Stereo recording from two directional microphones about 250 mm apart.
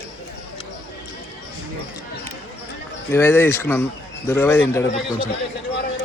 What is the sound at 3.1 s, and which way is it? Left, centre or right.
Speech, centre.